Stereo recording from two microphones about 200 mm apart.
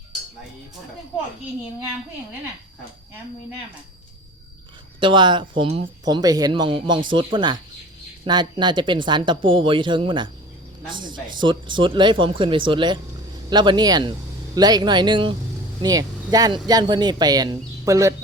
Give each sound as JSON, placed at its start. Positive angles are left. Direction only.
{"t": 4.9, "sound": "speech", "side_deg": -25}